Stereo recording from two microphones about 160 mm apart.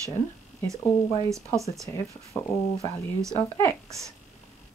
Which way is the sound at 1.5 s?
20° right (ahead or behind).